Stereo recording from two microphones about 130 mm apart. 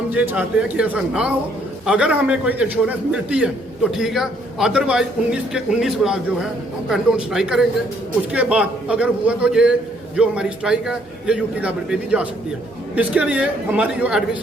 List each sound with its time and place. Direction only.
0.1 s a man's voice: 10° right (ahead or behind)